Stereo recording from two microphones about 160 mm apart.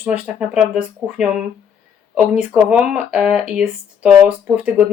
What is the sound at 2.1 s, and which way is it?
Speech, 5° right (ahead or behind).